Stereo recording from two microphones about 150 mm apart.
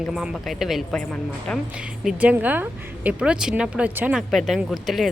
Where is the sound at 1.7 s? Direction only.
5° right (ahead or behind).